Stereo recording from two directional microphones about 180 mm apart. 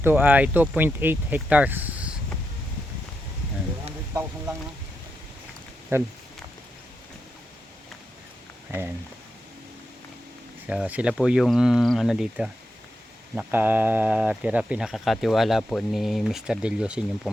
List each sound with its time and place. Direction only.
0.0 s speech: 10° right (ahead or behind)
4.1 s speech: 15° right (ahead or behind)
5.9 s speech: 15° right (ahead or behind)
10.7 s speech: 5° right (ahead or behind)